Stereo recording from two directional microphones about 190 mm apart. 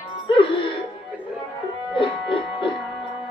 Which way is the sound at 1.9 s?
25° left (ahead or behind).